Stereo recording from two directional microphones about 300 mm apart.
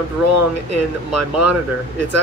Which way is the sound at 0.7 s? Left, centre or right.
Right.